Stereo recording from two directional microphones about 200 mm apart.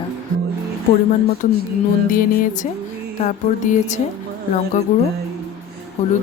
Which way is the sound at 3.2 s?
40° left (ahead or behind).